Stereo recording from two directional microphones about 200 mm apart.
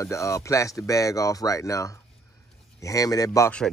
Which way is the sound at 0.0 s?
15° left (ahead or behind).